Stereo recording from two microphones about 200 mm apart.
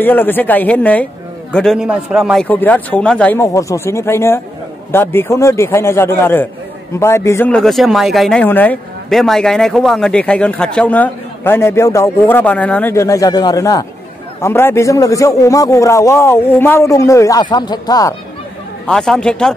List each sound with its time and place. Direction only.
0.0 s a man's voice: 10° left (ahead or behind)
2.4 s speech: 10° left (ahead or behind)
18.9 s a man's voice: 5° left (ahead or behind)